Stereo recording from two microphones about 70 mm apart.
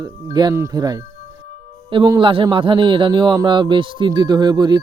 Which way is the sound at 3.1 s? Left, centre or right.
Right.